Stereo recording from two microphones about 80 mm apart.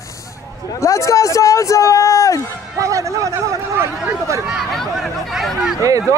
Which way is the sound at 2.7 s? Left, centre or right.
Right.